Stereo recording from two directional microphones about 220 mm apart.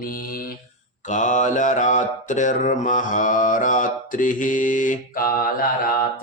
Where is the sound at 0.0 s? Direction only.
40° left (ahead or behind).